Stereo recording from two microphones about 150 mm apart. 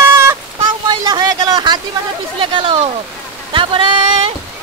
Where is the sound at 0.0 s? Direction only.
15° right (ahead or behind); by 4.0 s 35° right (ahead or behind).